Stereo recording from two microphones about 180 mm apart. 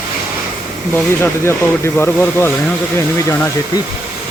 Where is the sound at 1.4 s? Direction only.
15° left (ahead or behind).